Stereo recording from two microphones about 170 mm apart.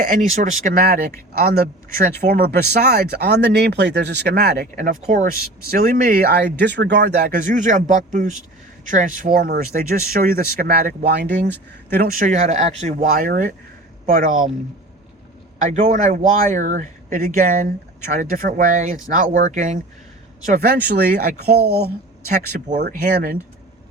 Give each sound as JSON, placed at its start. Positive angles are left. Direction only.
{"t": 0.0, "sound": "speech", "side_deg": -50}
{"t": 4.7, "sound": "speech", "side_deg": -50}
{"t": 7.3, "sound": "speech", "side_deg": -45}
{"t": 11.3, "sound": "speech", "side_deg": 10}
{"t": 11.9, "sound": "speech", "side_deg": -45}
{"t": 15.6, "sound": "speech", "side_deg": -45}
{"t": 20.5, "sound": "speech", "side_deg": -65}
{"t": 22.7, "sound": "speech", "side_deg": -45}
{"t": 23.1, "sound": "speech", "side_deg": -60}